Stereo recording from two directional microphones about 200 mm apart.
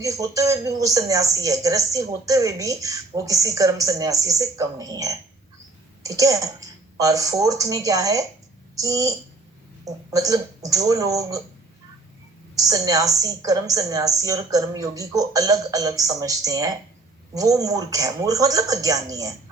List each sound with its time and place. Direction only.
0.0 s speech: 15° right (ahead or behind)
12.5 s speech: 15° right (ahead or behind)